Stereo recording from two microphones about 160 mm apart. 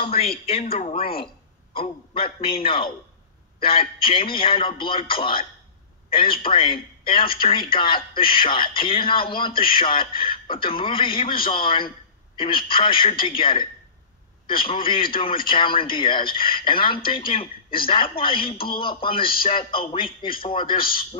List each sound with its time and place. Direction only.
0.0 s speech: 40° left (ahead or behind)
4.0 s speech: 35° left (ahead or behind)
14.7 s speech: 35° left (ahead or behind)
19.2 s speech: 65° left (ahead or behind)
19.5 s speech: 35° left (ahead or behind)